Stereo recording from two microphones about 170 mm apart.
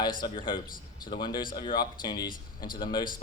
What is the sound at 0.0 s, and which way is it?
A man's voice, 25° left (ahead or behind).